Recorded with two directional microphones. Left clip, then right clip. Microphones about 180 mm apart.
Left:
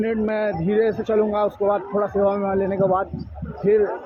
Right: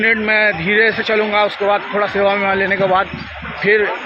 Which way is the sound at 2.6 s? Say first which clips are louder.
Right 6 dB; centre (ahead or behind).